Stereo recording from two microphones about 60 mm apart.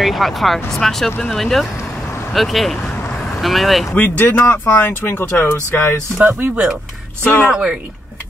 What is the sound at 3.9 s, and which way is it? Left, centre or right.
Speech, left.